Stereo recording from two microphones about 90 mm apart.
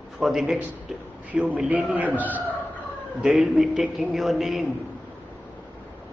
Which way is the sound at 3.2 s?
Centre (ahead or behind).